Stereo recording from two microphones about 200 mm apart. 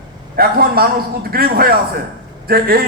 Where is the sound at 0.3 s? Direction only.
50° right (ahead or behind).